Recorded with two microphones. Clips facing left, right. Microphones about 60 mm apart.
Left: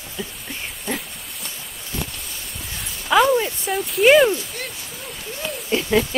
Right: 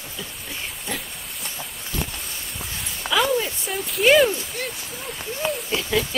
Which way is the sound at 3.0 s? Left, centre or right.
Right.